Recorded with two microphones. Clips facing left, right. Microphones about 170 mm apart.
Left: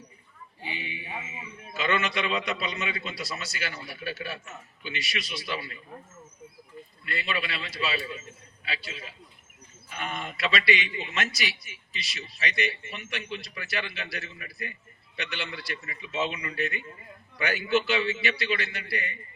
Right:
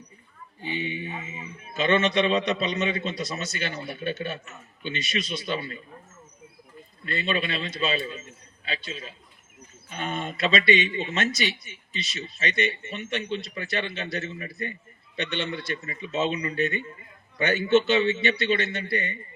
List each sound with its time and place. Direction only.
0.6 s a man's voice: 30° right (ahead or behind)
7.0 s a man's voice: 30° right (ahead or behind)
10.0 s a man's voice: 30° right (ahead or behind)
12.4 s a man's voice: 25° right (ahead or behind)